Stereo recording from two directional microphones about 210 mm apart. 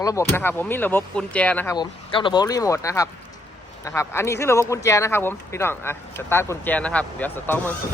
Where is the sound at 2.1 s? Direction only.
20° left (ahead or behind).